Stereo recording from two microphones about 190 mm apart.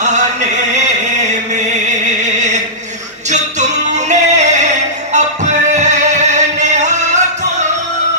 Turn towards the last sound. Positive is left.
turn(degrees=-40)  # may be behind; listen again after turning